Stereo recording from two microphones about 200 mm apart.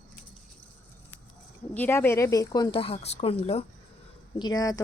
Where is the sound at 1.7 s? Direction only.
10° left (ahead or behind); by 3.6 s 30° left (ahead or behind).